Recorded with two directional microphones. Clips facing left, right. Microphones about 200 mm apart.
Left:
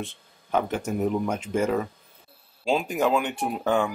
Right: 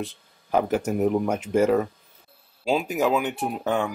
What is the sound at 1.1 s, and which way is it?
Speech, 40° right (ahead or behind).